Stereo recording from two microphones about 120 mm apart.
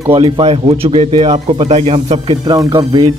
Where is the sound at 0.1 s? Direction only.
50° right (ahead or behind).